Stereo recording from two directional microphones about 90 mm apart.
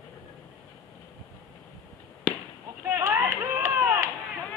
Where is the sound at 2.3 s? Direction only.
5° right (ahead or behind).